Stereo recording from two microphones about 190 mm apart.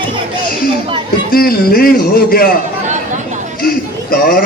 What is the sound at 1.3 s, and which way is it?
Speech, 50° left (ahead or behind).